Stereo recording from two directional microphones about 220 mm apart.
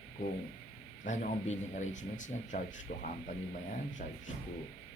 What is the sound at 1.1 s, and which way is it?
Speech, 35° left (ahead or behind).